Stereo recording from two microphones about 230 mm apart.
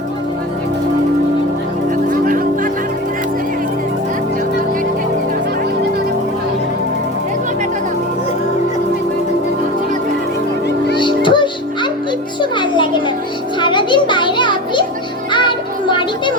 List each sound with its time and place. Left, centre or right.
2.0 s music: right
10.9 s music: left